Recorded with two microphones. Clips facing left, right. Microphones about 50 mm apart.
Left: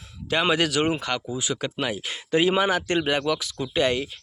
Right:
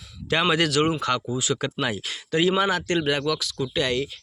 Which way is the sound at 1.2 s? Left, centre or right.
Centre.